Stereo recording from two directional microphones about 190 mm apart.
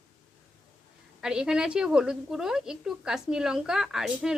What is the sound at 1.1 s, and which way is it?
A woman's voice, 5° right (ahead or behind).